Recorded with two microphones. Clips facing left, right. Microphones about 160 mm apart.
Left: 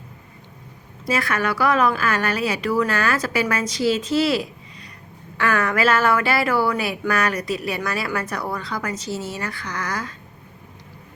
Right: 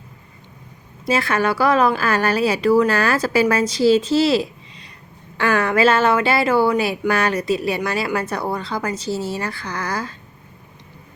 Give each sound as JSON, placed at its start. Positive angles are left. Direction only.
{"t": 1.0, "sound": "a woman's voice", "side_deg": -30}